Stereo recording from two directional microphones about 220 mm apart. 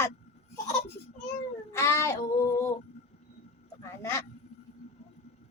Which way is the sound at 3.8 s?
10° left (ahead or behind).